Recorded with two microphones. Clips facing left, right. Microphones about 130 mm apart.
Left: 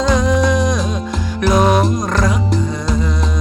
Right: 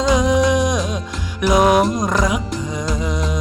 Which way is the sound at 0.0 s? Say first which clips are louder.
Even; 15° right (ahead or behind).